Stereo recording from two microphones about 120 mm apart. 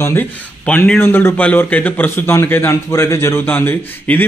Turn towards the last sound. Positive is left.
turn(degrees=15)  # may be behind; listen again after turning